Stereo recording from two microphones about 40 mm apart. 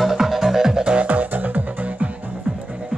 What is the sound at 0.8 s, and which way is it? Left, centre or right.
Music, right.